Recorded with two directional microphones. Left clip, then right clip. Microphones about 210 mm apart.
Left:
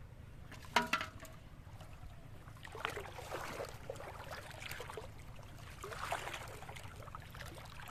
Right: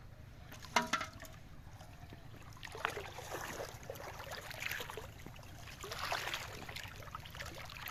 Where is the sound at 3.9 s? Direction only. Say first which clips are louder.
Right 1 dB; 25° right (ahead or behind).